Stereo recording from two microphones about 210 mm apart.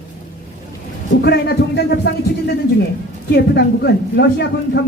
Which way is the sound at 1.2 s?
55° left (ahead or behind).